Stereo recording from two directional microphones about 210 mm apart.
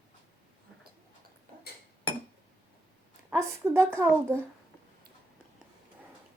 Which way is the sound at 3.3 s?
15° right (ahead or behind).